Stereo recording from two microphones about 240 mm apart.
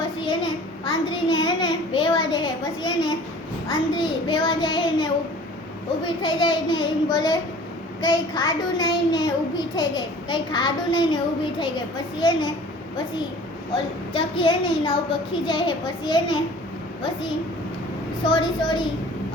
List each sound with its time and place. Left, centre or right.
0.2 s a sound: centre
3.7 s a woman's voice: centre
6.2 s a woman's voice: centre
14.1 s a woman's voice: left